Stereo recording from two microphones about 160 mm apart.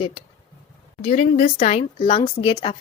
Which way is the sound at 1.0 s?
50° left (ahead or behind).